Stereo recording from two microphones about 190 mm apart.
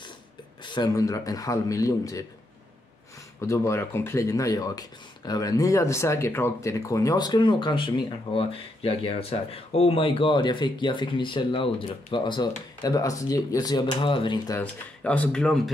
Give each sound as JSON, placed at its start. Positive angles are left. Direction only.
{"t": 0.7, "sound": "speech", "side_deg": 20}
{"t": 3.3, "sound": "speech", "side_deg": 15}
{"t": 14.6, "sound": "speech", "side_deg": 5}